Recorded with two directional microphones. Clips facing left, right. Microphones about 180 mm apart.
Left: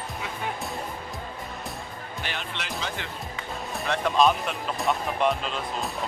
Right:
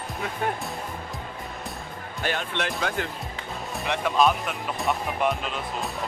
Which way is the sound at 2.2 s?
45° right (ahead or behind).